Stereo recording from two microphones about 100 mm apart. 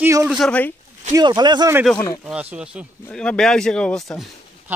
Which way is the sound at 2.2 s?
15° right (ahead or behind).